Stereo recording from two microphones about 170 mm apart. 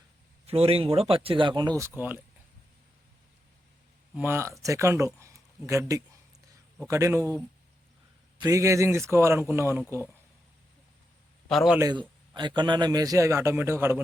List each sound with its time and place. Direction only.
0.4 s speech: 35° right (ahead or behind)
2.0 s a man's voice: 10° right (ahead or behind)
4.1 s a man's voice: 10° right (ahead or behind)
8.4 s a man's voice: 20° right (ahead or behind)
11.4 s a man's voice: centre (ahead or behind)
11.8 s a man's voice: 25° right (ahead or behind)